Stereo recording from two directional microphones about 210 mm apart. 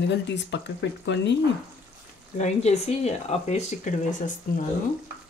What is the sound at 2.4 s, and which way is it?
Speech, 30° left (ahead or behind).